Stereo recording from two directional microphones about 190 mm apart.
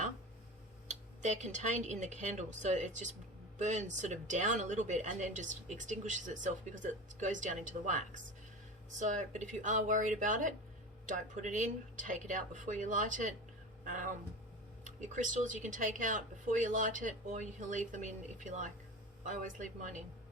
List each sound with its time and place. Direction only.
0.9 s speech: 40° right (ahead or behind)